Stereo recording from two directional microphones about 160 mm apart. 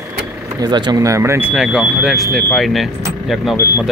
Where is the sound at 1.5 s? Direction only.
5° right (ahead or behind).